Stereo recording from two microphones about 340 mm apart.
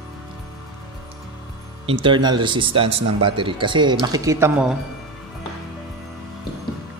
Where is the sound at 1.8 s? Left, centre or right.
Centre.